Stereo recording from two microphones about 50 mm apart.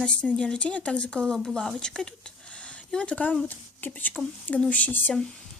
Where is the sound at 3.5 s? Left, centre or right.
Left.